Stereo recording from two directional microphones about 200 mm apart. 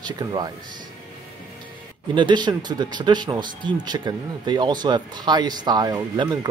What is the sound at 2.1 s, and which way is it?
Speech, 20° right (ahead or behind).